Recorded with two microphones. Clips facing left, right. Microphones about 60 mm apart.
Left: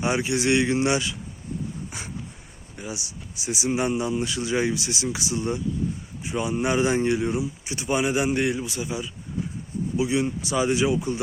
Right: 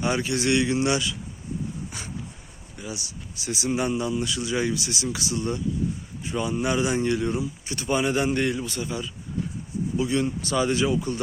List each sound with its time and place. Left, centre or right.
0.0 s speech: left
2.7 s speech: left
3.3 s speech: centre
7.1 s speech: centre